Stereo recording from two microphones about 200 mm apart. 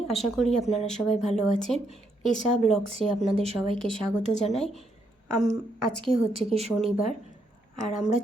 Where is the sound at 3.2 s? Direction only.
30° right (ahead or behind).